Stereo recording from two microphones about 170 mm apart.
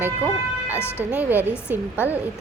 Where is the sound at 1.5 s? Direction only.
15° left (ahead or behind).